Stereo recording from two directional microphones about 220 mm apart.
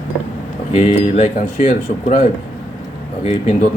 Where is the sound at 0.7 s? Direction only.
30° left (ahead or behind).